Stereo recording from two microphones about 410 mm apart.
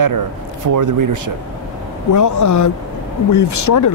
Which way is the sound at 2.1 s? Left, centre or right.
Left.